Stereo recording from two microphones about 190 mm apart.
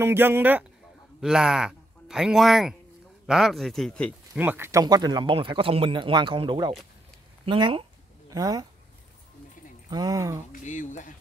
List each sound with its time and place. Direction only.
0.0 s speech: 10° right (ahead or behind)
4.4 s speech: 10° right (ahead or behind)
9.8 s speech: 20° right (ahead or behind)
10.5 s speech: 40° left (ahead or behind)